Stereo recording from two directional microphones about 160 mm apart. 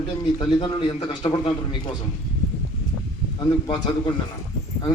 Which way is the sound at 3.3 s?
25° left (ahead or behind).